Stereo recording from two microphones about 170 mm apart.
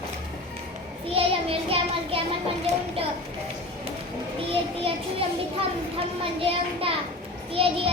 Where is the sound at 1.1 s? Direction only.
35° right (ahead or behind).